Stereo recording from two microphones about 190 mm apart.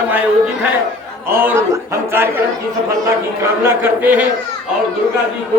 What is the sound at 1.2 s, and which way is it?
Speech, 10° right (ahead or behind).